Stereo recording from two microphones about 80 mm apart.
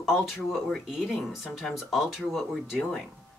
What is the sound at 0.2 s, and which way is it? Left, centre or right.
Speech, centre.